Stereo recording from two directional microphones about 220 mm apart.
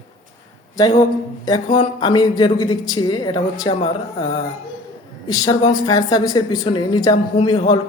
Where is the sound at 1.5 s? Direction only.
20° left (ahead or behind).